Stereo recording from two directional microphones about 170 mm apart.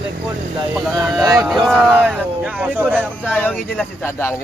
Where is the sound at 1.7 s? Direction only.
Centre (ahead or behind).